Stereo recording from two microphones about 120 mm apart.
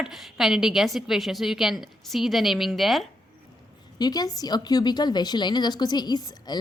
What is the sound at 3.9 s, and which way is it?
Speech, 35° left (ahead or behind).